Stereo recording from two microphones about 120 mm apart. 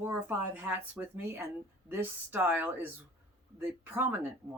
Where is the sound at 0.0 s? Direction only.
20° right (ahead or behind).